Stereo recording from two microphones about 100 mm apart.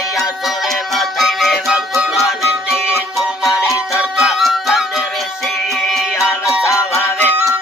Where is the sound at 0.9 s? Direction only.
Centre (ahead or behind).